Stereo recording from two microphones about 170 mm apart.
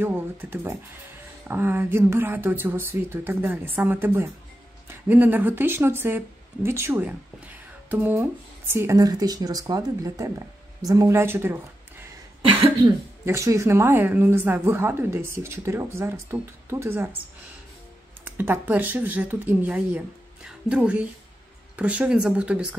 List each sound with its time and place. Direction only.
0.0 s speech: 10° right (ahead or behind)
12.4 s cough: 30° right (ahead or behind)
13.2 s speech: 15° right (ahead or behind)
18.4 s speech: 10° right (ahead or behind)